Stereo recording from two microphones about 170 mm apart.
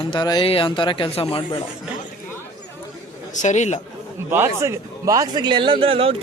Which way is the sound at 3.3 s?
45° left (ahead or behind).